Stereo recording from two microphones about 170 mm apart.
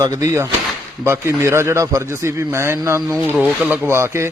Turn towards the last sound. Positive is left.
turn(degrees=-15)  # may be behind; listen again after turning